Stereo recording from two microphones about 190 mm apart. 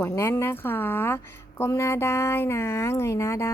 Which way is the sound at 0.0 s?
15° left (ahead or behind).